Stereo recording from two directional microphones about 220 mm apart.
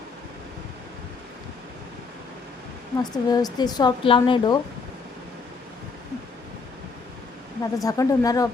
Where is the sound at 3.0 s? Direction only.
15° left (ahead or behind).